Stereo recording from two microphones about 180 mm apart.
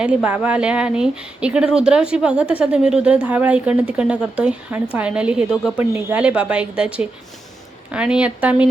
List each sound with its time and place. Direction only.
0.0 s speech: 5° right (ahead or behind)